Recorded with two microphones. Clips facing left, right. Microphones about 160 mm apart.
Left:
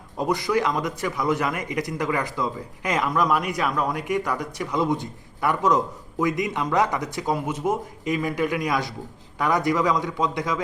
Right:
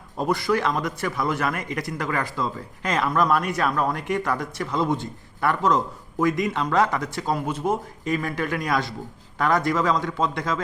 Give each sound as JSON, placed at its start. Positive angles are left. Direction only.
{"t": 0.2, "sound": "a man's voice", "side_deg": 15}